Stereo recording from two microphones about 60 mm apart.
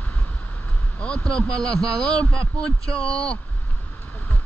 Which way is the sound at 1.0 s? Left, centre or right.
Centre.